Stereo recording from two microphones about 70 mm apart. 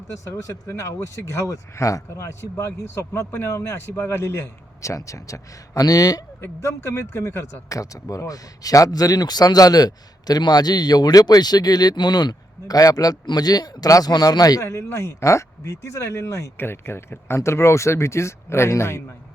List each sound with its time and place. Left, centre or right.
0.7 s a man's voice: left
6.4 s speech: left
7.7 s speech: left
14.1 s speech: left
14.6 s speech: left